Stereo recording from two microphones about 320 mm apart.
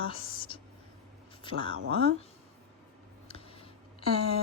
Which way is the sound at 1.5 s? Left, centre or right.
Centre.